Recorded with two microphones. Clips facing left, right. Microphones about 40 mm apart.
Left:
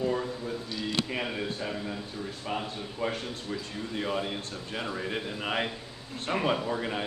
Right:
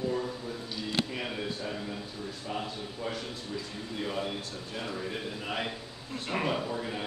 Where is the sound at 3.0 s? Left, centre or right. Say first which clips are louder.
Left 5 dB; left.